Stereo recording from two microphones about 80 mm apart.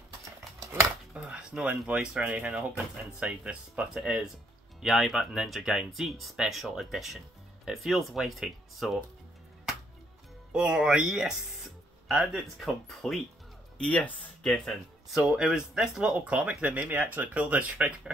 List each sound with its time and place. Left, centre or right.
1.1 s speech: centre
10.5 s speech: centre
13.7 s speech: centre
14.4 s speech: centre